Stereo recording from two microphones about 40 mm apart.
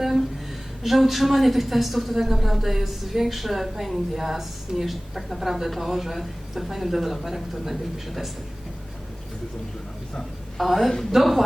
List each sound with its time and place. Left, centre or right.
0.0 s a sound: centre
0.8 s a woman's voice: centre
10.6 s a woman's voice: centre